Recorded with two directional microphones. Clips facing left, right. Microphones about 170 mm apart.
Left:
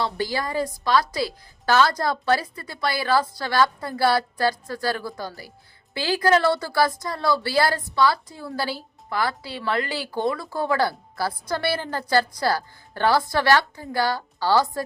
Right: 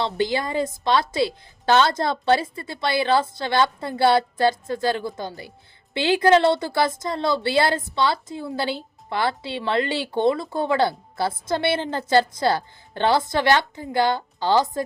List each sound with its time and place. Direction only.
0.0 s a woman's voice: 25° right (ahead or behind)